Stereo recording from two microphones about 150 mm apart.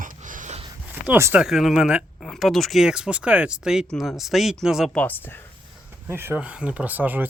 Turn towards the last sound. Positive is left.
turn(degrees=-10)  # may be behind; listen again after turning